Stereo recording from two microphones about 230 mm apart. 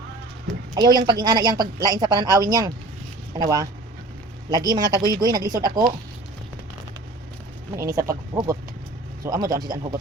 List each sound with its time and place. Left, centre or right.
0.7 s a woman's voice: centre
7.8 s a woman's voice: centre